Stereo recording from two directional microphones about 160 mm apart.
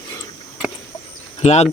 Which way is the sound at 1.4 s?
40° left (ahead or behind).